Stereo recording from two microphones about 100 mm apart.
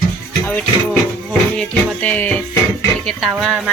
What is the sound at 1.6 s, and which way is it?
Speech, 15° left (ahead or behind).